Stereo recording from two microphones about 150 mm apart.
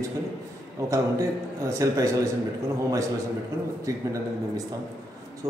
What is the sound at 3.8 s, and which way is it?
Speech, 20° right (ahead or behind).